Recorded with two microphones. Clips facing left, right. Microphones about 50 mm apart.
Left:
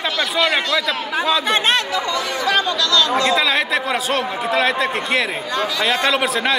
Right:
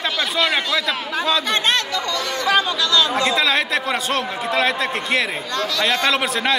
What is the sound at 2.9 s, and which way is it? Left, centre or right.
Speech, centre.